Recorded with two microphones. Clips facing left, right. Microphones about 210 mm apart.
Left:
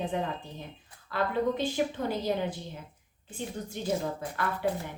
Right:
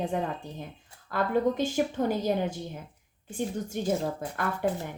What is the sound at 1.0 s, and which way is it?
Speech, 45° right (ahead or behind).